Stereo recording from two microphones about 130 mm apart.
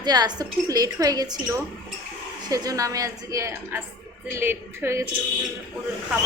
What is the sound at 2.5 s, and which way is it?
Speech, 25° right (ahead or behind).